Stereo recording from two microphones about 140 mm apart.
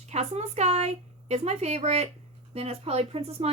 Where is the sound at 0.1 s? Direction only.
50° right (ahead or behind).